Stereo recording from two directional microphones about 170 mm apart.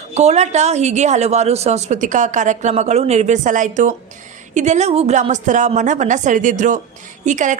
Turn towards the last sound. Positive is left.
turn(degrees=-50)  # may be behind; listen again after turning